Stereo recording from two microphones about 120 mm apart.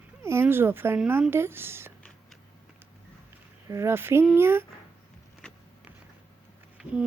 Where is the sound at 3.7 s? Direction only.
20° right (ahead or behind).